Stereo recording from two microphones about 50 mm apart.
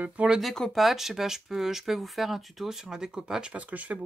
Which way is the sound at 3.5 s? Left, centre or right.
Right.